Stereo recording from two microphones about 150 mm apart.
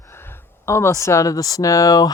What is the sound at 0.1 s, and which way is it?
Speech, 15° left (ahead or behind).